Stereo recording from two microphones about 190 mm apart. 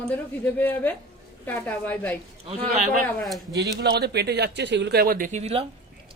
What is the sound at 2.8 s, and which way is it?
Speech, 45° right (ahead or behind).